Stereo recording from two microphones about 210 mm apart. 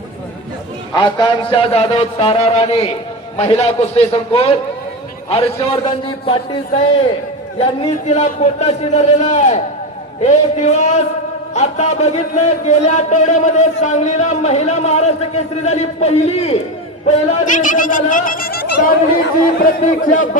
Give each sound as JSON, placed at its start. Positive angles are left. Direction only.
{"t": 0.9, "sound": "a man's voice", "side_deg": 20}